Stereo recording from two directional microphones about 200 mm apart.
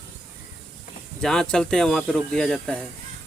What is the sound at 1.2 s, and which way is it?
Speech, 5° left (ahead or behind).